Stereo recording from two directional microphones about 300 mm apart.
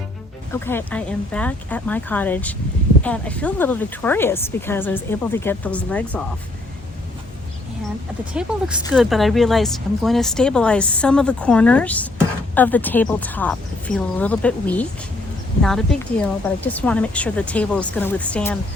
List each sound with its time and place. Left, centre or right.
0.5 s a woman's voice: centre
8.3 s a woman's voice: centre